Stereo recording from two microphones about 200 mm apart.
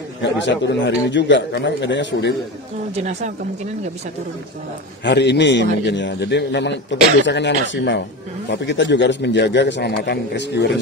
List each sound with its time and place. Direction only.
0.2 s a man's voice: 65° left (ahead or behind)
3.0 s speech: 35° right (ahead or behind)
5.0 s a man's voice: 60° left (ahead or behind)